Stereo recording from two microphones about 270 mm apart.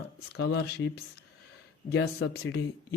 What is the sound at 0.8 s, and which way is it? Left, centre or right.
A man's voice, left.